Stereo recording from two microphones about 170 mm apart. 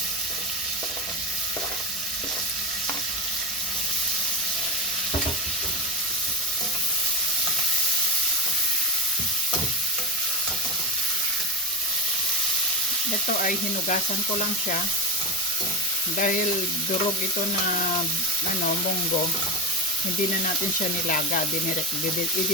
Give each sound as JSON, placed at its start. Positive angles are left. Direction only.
{"t": 13.4, "sound": "frying", "side_deg": 50}
{"t": 16.1, "sound": "frying", "side_deg": 50}
{"t": 21.1, "sound": "frying", "side_deg": 50}